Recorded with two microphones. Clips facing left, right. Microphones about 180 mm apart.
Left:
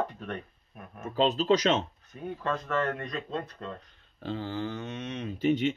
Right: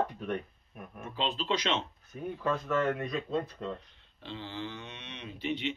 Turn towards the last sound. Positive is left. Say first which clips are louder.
# left 8 dB
turn(degrees=45)  # may be behind; listen again after turning